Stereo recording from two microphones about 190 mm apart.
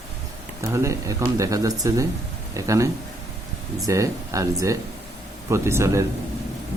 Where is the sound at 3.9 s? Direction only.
15° right (ahead or behind).